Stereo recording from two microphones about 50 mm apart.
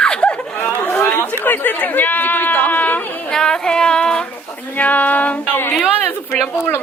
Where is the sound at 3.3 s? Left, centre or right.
Centre.